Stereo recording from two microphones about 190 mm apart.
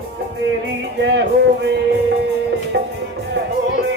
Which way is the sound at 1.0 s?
70° right (ahead or behind).